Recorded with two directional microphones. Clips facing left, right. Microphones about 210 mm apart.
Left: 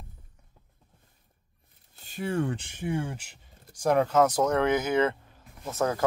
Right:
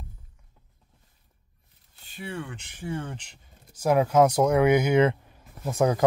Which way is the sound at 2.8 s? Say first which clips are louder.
Left 1 dB; 15° left (ahead or behind).